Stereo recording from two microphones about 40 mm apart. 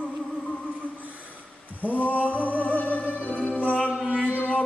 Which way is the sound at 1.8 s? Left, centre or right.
Left.